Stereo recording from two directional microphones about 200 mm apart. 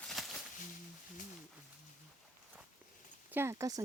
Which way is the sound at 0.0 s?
Centre (ahead or behind).